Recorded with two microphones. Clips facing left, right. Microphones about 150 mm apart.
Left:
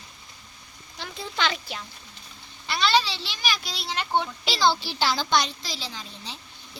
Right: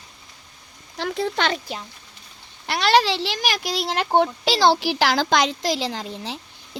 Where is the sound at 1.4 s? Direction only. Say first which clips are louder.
Right 4 dB; 45° right (ahead or behind).